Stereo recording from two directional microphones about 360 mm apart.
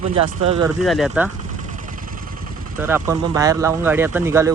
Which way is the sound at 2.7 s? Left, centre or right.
Centre.